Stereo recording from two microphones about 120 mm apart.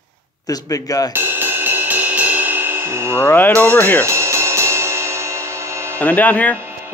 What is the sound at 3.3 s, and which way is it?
Speech, 15° left (ahead or behind).